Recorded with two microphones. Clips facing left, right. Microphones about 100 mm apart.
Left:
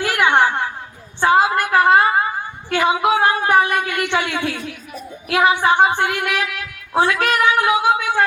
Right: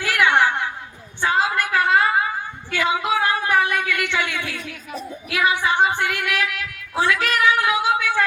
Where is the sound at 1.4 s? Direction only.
50° left (ahead or behind).